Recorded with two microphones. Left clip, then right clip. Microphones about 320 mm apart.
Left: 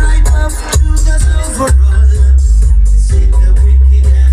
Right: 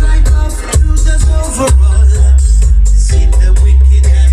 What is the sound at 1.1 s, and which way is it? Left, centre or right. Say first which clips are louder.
Music: right 1 dB; centre.